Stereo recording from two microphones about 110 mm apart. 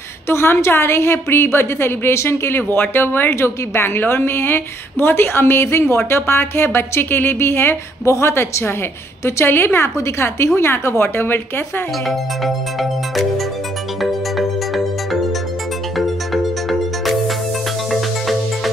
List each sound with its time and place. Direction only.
0.3 s a woman's voice: 25° left (ahead or behind)